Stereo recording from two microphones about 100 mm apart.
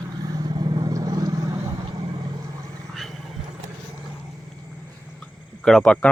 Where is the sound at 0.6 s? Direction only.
40° right (ahead or behind).